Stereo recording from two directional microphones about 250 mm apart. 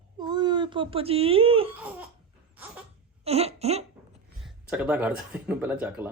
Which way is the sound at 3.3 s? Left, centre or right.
Right.